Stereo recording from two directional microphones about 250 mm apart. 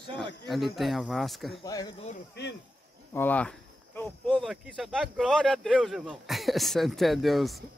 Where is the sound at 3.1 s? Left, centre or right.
Centre.